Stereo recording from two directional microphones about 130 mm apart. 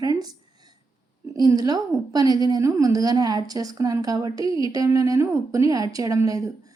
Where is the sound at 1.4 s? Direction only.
30° right (ahead or behind).